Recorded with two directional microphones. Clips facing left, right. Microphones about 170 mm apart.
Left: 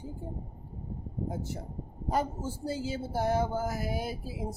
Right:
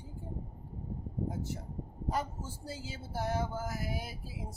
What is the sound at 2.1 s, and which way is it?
A woman's voice, 25° left (ahead or behind).